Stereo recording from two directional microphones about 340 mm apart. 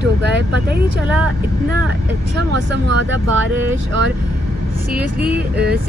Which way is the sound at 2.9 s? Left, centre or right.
Right.